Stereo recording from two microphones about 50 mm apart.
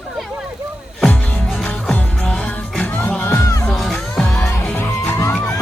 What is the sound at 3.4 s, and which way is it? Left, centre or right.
Music, left.